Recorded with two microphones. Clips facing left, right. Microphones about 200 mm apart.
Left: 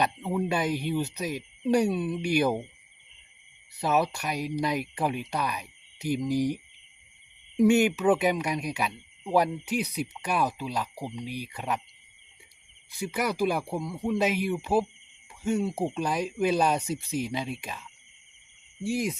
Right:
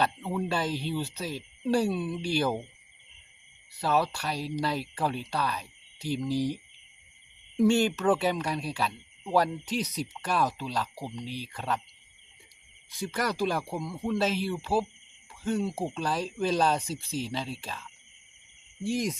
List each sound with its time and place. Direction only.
0.0 s speech: 15° left (ahead or behind)
3.8 s speech: 20° left (ahead or behind)
13.0 s speech: 10° left (ahead or behind)
18.9 s speech: 10° left (ahead or behind)